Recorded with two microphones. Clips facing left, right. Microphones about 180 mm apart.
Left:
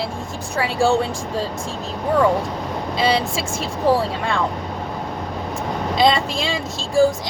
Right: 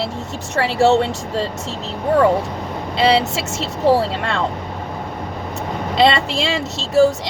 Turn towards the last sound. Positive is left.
turn(degrees=-75)  # may be behind; listen again after turning